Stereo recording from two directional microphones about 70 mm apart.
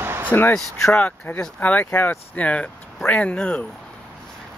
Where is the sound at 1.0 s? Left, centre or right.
Left.